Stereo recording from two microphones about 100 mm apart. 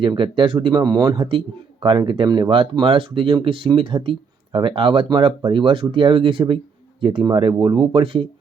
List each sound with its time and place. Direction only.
0.0 s speech: 55° right (ahead or behind)